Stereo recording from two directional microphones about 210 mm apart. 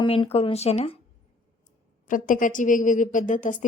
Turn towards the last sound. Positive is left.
turn(degrees=35)  # may be behind; listen again after turning